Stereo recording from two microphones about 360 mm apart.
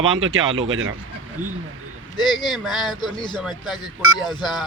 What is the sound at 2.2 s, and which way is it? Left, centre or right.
Speech, centre.